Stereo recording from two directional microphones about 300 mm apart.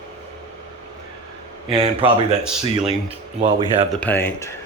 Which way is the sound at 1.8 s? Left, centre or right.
Centre.